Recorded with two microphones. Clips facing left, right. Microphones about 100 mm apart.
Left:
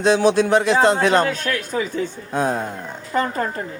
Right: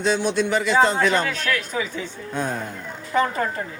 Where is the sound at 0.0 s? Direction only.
70° left (ahead or behind).